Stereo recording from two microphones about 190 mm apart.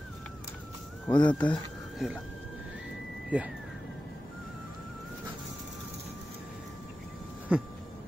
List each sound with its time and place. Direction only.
1.1 s speech: 25° left (ahead or behind)
2.0 s speech: centre (ahead or behind)
3.3 s speech: 5° right (ahead or behind)
7.5 s a sound: 5° right (ahead or behind)